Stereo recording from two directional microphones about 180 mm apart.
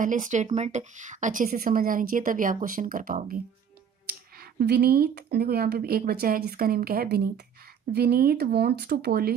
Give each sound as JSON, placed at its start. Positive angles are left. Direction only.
{"t": 0.0, "sound": "a woman's voice", "side_deg": -45}
{"t": 4.4, "sound": "speech", "side_deg": -60}